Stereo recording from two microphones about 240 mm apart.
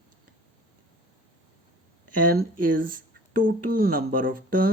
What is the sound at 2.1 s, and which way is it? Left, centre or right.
Speech, right.